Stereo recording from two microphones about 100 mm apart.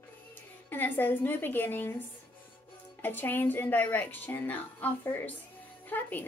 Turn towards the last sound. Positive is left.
turn(degrees=20)  # may be behind; listen again after turning